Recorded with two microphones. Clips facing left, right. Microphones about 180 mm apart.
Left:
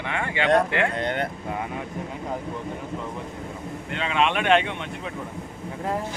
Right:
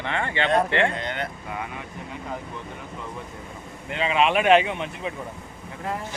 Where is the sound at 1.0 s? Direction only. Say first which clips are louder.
Left 4 dB; 50° left (ahead or behind).